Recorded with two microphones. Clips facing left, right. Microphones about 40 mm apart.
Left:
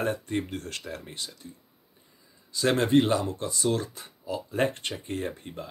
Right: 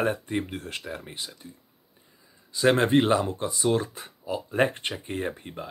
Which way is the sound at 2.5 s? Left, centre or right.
Right.